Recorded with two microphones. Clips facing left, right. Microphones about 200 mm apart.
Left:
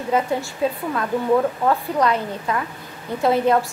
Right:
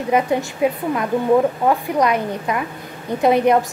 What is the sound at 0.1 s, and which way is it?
A woman's voice, 15° right (ahead or behind).